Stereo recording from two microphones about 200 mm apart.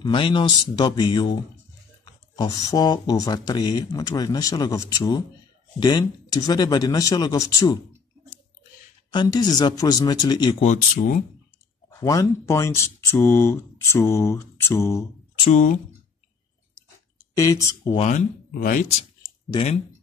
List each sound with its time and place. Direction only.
0.0 s speech: 25° left (ahead or behind)
9.1 s speech: 20° left (ahead or behind)
10.6 s speech: 40° left (ahead or behind)
11.9 s speech: 15° left (ahead or behind)
15.3 s speech: 25° left (ahead or behind)
17.2 s speech: 15° left (ahead or behind)
17.9 s speech: 40° left (ahead or behind)
19.5 s speech: 30° left (ahead or behind)